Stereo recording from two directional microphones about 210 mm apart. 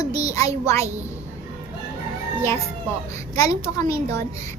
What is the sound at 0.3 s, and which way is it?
Child singing, 15° left (ahead or behind).